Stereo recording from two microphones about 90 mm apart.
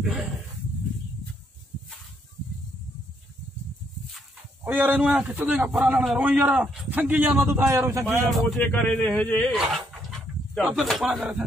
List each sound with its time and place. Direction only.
0.0 s speech: centre (ahead or behind)
4.6 s a man's voice: 15° right (ahead or behind)
6.9 s a man's voice: 20° right (ahead or behind)
8.3 s speech: centre (ahead or behind)
8.8 s speech: 15° left (ahead or behind)
10.7 s speech: centre (ahead or behind)